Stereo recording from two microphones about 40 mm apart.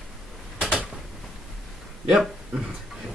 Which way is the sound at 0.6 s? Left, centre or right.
Centre.